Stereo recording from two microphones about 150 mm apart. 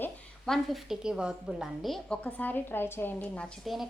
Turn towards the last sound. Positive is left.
turn(degrees=0)  # may be behind; listen again after turning